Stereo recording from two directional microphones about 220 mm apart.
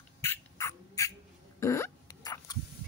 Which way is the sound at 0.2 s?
10° left (ahead or behind).